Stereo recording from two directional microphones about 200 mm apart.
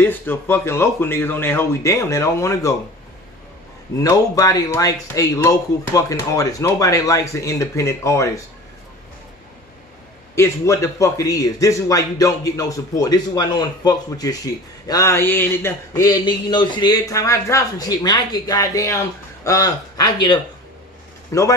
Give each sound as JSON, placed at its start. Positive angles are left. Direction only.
{"t": 0.0, "sound": "a man's voice", "side_deg": 10}
{"t": 4.0, "sound": "a man's voice", "side_deg": 15}
{"t": 10.3, "sound": "a man's voice", "side_deg": 15}